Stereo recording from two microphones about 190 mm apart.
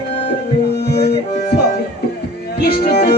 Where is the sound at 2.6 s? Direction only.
55° left (ahead or behind).